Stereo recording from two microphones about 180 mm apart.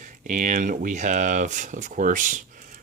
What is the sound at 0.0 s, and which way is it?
Speech, 45° right (ahead or behind).